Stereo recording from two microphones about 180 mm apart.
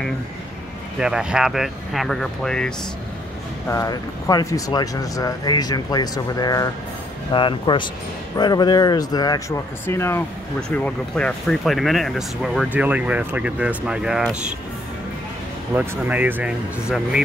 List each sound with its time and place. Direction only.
0.9 s speech: 5° right (ahead or behind)
3.6 s speech: 20° left (ahead or behind); by 14.3 s 5° right (ahead or behind)
15.7 s speech: 10° right (ahead or behind)